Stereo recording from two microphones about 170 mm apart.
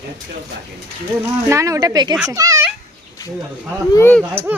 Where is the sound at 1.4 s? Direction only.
20° right (ahead or behind).